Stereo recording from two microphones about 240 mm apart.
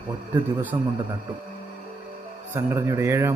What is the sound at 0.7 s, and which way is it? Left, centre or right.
Speech, right.